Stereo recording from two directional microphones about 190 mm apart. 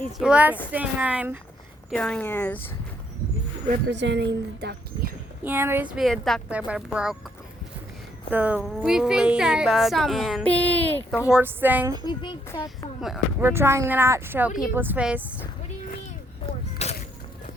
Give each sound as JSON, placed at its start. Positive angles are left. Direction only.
{"t": 0.0, "sound": "speech", "side_deg": -5}
{"t": 1.9, "sound": "speech", "side_deg": 5}
{"t": 3.8, "sound": "speech", "side_deg": -65}
{"t": 5.4, "sound": "speech", "side_deg": -10}
{"t": 8.3, "sound": "speech", "side_deg": -5}
{"t": 11.3, "sound": "speech", "side_deg": -10}
{"t": 12.0, "sound": "a child's voice", "side_deg": 25}
{"t": 13.4, "sound": "speech", "side_deg": -15}
{"t": 16.8, "sound": "a sound", "side_deg": 35}